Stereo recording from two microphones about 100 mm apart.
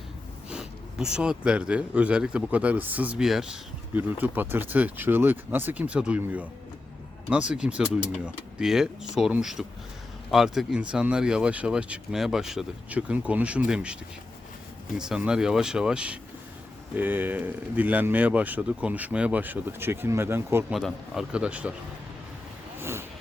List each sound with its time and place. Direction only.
0.5 s speech: 10° right (ahead or behind)
3.9 s speech: 20° right (ahead or behind)
14.9 s speech: 5° right (ahead or behind); by 20.7 s 25° right (ahead or behind)
20.7 s speech: centre (ahead or behind)
22.8 s vehicle: 25° right (ahead or behind)